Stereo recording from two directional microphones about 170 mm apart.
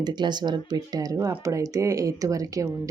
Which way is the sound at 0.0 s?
25° right (ahead or behind).